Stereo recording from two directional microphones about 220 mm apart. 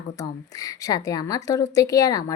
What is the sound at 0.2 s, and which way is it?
Speech, 15° left (ahead or behind).